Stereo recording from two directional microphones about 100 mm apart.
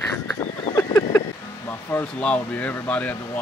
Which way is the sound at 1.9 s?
15° left (ahead or behind).